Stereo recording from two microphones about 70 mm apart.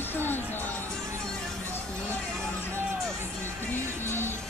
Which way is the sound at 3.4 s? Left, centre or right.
Right.